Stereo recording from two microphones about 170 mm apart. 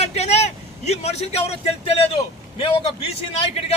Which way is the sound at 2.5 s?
30° left (ahead or behind).